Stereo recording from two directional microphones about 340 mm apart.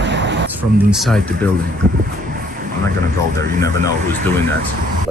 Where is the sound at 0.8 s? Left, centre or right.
Centre.